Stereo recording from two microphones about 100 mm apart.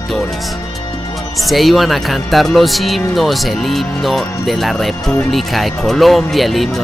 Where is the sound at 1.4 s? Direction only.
Centre (ahead or behind).